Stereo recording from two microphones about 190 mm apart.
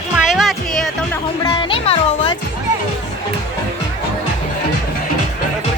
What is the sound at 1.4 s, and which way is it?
Music, 25° left (ahead or behind).